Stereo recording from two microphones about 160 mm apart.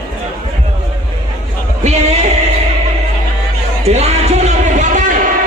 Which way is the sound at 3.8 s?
40° right (ahead or behind).